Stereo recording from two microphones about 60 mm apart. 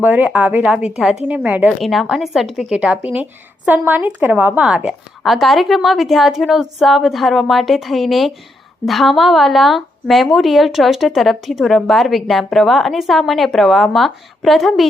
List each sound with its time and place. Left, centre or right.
0.0 s a woman's voice: right
0.6 s a woman's voice: centre
1.8 s a woman's voice: centre
2.7 s a woman's voice: right
4.6 s speech: centre
5.2 s a woman's voice: centre